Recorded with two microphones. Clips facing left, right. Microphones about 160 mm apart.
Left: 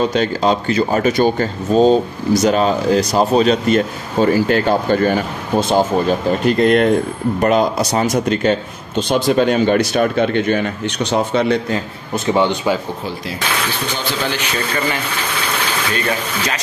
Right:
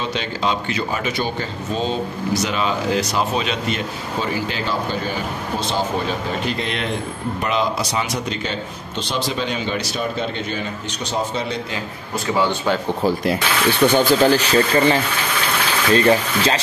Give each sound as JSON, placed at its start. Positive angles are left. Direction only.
{"t": 0.0, "sound": "a man's voice", "side_deg": 45}
{"t": 13.9, "sound": "speech", "side_deg": -40}
{"t": 15.9, "sound": "a sound", "side_deg": -30}